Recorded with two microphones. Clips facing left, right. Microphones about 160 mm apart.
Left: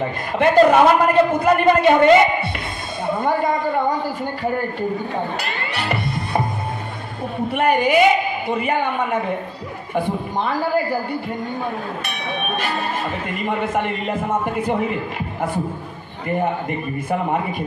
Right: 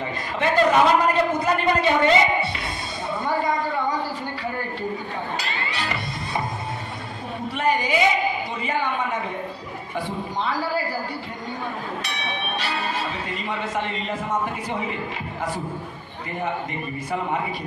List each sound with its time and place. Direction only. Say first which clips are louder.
0.0 s a man's voice: left 6 dB; 55° left (ahead or behind)
3.1 s a sound: left 5 dB; 50° left (ahead or behind)
5.4 s music: left 3 dB; 55° left (ahead or behind)
7.4 s a man's voice: left 6 dB; 55° left (ahead or behind)
13.3 s a man's voice: left 6 dB; 55° left (ahead or behind)